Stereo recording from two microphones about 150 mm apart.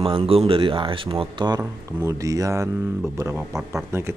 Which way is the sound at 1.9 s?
20° right (ahead or behind).